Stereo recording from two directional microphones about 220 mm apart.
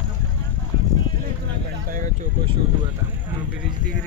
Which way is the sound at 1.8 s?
35° right (ahead or behind).